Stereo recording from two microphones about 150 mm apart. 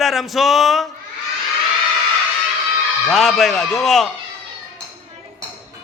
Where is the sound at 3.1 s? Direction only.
Centre (ahead or behind).